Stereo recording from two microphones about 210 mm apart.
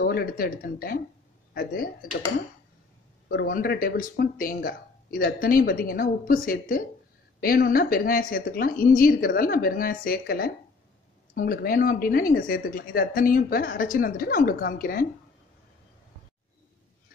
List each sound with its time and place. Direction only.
0.0 s speech: 45° left (ahead or behind)
3.3 s speech: 45° left (ahead or behind)